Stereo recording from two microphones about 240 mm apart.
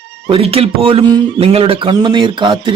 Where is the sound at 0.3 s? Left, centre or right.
Right.